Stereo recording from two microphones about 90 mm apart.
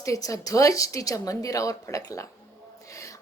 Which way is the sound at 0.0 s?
40° left (ahead or behind).